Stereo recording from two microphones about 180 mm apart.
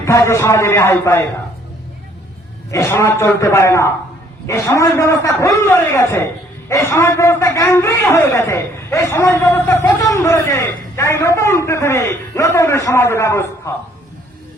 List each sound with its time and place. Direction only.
0.0 s a man's voice: 15° left (ahead or behind)
2.6 s a man's voice: 15° left (ahead or behind)